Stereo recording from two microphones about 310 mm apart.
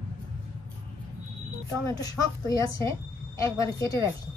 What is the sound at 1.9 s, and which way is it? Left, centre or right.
A woman's voice, centre.